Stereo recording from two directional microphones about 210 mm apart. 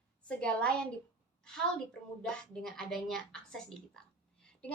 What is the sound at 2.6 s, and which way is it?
A woman's voice, centre (ahead or behind).